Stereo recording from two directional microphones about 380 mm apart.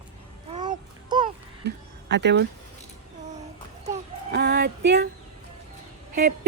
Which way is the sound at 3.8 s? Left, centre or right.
Right.